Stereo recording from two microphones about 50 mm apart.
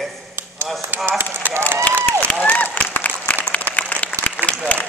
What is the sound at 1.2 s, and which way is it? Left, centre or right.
Speech, right.